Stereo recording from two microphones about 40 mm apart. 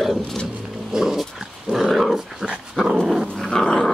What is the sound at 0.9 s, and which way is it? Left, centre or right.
Dog, centre.